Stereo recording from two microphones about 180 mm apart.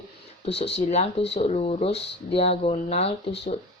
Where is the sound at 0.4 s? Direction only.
35° left (ahead or behind).